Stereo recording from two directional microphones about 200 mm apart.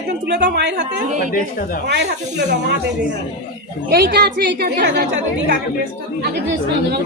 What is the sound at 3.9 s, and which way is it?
A woman's voice, 55° right (ahead or behind).